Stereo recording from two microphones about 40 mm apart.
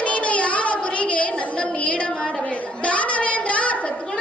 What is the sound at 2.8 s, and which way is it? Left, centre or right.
Child singing, left.